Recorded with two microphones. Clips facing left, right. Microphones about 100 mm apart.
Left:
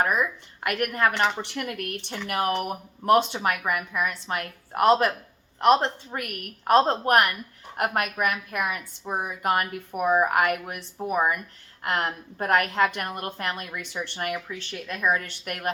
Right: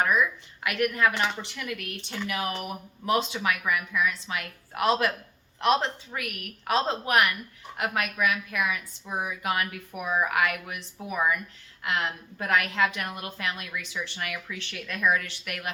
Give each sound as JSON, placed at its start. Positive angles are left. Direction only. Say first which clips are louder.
{"t": 0.0, "sound": "a woman's voice", "louder": "even", "side_deg": 45}
{"t": 14.4, "sound": "speech", "louder": "left 3 dB", "side_deg": 25}
{"t": 15.2, "sound": "a woman's voice", "louder": "left 4 dB", "side_deg": 45}